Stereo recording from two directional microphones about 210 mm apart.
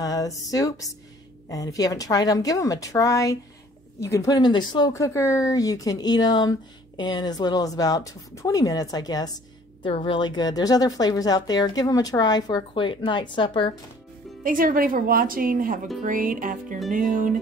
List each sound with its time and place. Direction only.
0.0 s a woman's voice: 15° left (ahead or behind)
14.4 s speech: 40° right (ahead or behind)